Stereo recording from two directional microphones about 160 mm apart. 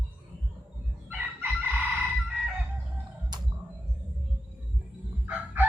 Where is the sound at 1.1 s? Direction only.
10° right (ahead or behind).